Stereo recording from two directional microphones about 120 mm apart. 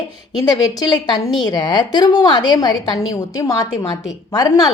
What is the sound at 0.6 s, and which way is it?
A woman's voice, 35° left (ahead or behind).